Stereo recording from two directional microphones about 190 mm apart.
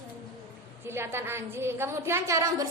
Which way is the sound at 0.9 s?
15° right (ahead or behind).